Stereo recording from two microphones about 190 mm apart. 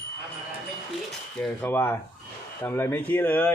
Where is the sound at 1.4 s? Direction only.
10° left (ahead or behind).